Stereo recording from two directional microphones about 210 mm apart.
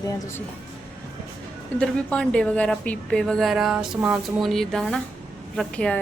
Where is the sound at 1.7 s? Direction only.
5° left (ahead or behind).